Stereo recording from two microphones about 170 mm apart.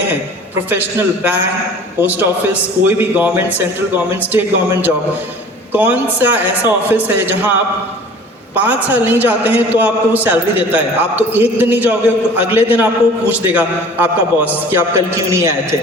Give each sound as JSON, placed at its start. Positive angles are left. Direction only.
{"t": 0.7, "sound": "a man's voice", "side_deg": -10}
{"t": 8.5, "sound": "a man's voice", "side_deg": -10}